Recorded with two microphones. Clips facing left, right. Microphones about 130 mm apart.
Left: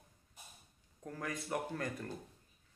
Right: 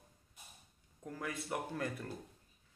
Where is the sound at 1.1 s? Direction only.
5° right (ahead or behind).